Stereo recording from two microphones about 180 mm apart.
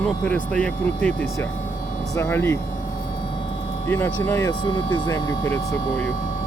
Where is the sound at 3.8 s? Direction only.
10° left (ahead or behind).